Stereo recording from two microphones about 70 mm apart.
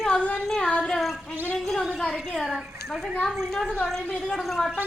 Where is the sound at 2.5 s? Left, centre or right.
Centre.